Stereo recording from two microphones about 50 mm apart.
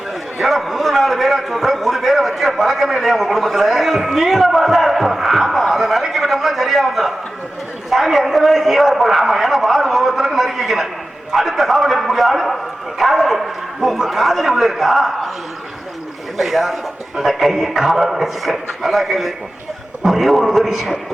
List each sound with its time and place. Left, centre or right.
0.3 s a sound: centre
11.3 s a man's voice: centre
16.4 s a man's voice: centre